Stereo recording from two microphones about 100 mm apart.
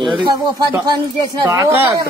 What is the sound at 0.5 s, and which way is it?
Speech, 35° right (ahead or behind).